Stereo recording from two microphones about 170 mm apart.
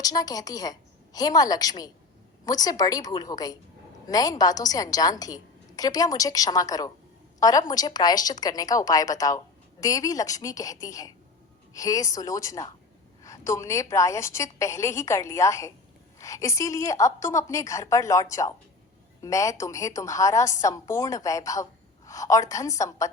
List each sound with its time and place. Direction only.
0.0 s a woman's voice: 20° left (ahead or behind)